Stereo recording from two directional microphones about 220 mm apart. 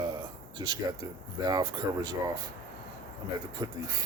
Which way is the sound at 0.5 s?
20° right (ahead or behind).